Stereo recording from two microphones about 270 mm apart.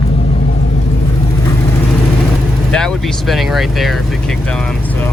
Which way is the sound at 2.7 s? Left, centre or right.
Centre.